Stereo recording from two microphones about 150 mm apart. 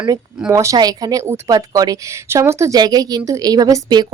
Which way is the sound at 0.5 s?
20° right (ahead or behind).